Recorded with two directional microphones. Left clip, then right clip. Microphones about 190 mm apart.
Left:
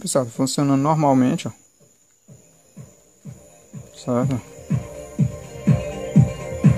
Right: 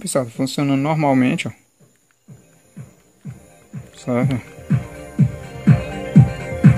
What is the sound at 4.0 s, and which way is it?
Speech, centre (ahead or behind).